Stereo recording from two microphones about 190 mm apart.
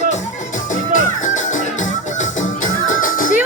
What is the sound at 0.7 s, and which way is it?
Music, 40° left (ahead or behind).